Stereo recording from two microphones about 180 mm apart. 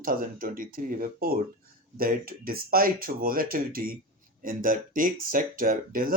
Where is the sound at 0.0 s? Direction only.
50° right (ahead or behind).